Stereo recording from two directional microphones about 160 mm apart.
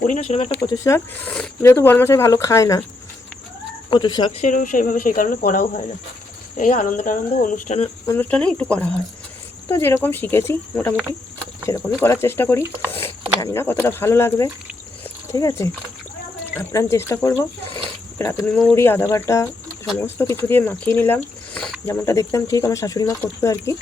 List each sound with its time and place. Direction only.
0.1 s speech: 40° left (ahead or behind)
0.6 s speech: 20° left (ahead or behind)
3.8 s speech: 30° left (ahead or behind)
4.4 s speech: 55° left (ahead or behind)
8.0 s speech: 15° left (ahead or behind)
15.0 s a sound: 20° left (ahead or behind)
16.6 s speech: 20° left (ahead or behind)